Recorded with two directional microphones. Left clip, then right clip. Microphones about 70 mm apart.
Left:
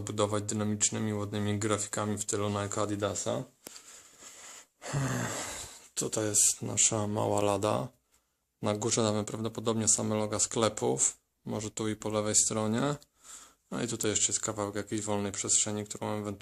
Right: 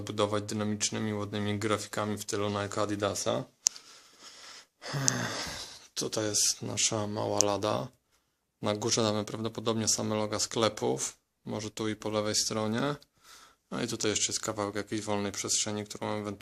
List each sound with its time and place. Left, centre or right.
0.0 s speech: centre
3.0 s speech: right
4.2 s wheeze: left
5.1 s a sound: left
6.6 s speech: centre
7.1 s speech: left
8.6 s speech: centre
10.3 s speech: centre
13.7 s speech: centre